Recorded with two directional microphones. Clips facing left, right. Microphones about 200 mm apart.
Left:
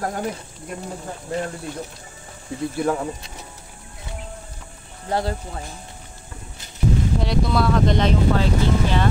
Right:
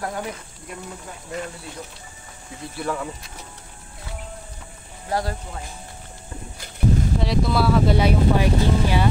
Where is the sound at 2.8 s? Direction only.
45° left (ahead or behind).